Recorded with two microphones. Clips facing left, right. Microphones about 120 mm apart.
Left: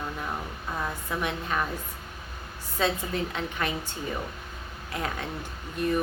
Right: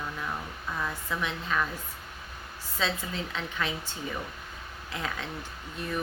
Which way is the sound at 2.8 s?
55° left (ahead or behind).